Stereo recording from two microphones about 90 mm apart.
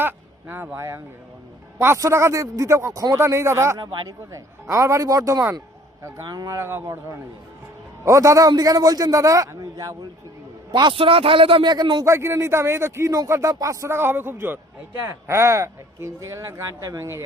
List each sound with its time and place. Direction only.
0.0 s speech: 20° right (ahead or behind); by 3.2 s 40° right (ahead or behind)
3.2 s speech: 30° right (ahead or behind)
6.6 s speech: 30° right (ahead or behind)
8.0 s speech: 35° right (ahead or behind)
10.7 s a man's voice: 55° right (ahead or behind)
10.9 s speech: 90° right; by 12.0 s 50° right (ahead or behind)
12.0 s speech: 30° right (ahead or behind)